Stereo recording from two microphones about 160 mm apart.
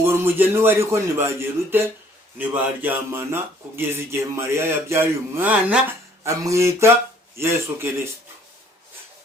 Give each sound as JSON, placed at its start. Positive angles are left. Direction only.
{"t": 0.0, "sound": "speech", "side_deg": -15}